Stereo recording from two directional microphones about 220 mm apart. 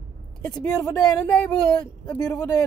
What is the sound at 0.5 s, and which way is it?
Speech, 15° left (ahead or behind).